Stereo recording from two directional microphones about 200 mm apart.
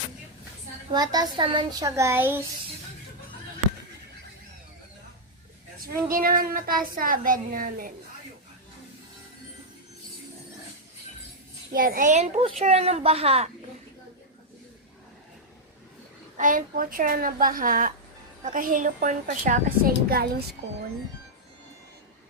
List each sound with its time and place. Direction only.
0.9 s a child's voice: 20° right (ahead or behind)
5.8 s a woman's voice: 45° right (ahead or behind)
11.7 s a woman's voice: 45° right (ahead or behind); by 13.5 s 30° right (ahead or behind)
16.4 s a woman's voice: 40° right (ahead or behind)